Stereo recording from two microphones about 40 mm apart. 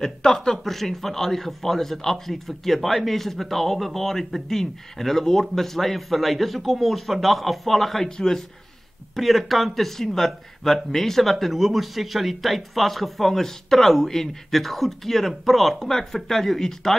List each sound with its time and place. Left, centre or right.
0.0 s a man's voice: centre
9.1 s a man's voice: centre